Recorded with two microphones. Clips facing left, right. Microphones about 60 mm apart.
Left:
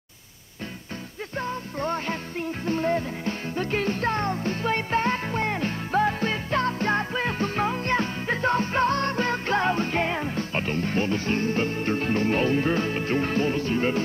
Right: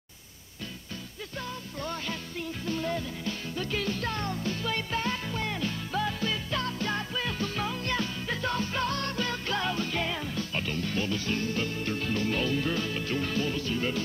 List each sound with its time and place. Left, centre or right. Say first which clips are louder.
1.3 s music: left 8 dB; left